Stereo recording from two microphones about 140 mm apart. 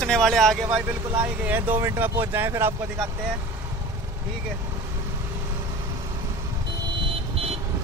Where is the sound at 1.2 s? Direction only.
15° right (ahead or behind).